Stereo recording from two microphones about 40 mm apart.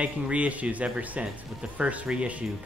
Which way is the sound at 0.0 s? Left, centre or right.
Right.